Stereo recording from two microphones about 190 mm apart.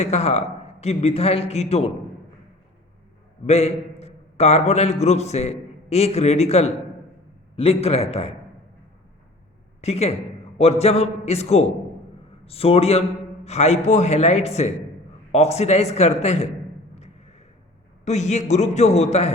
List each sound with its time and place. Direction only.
0.0 s a man's voice: 35° left (ahead or behind)
3.4 s a man's voice: 35° left (ahead or behind)
9.8 s a man's voice: 35° left (ahead or behind)
16.9 s a sound: 35° left (ahead or behind)
18.0 s a man's voice: 35° left (ahead or behind)